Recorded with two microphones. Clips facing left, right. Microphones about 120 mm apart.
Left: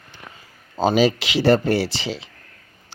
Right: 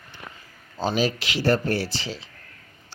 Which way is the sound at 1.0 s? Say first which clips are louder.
Left 6 dB; 90° left.